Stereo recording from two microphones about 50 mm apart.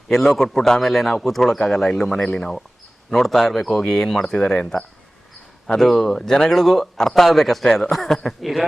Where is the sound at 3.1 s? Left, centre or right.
Centre.